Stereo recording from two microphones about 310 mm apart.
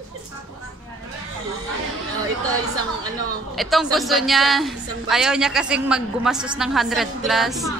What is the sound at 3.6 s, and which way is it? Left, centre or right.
A woman's voice, centre.